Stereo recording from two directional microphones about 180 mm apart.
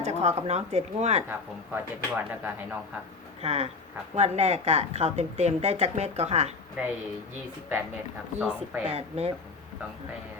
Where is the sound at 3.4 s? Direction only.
35° right (ahead or behind).